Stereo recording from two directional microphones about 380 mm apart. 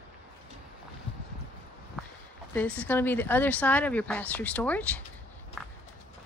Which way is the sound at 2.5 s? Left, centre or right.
Centre.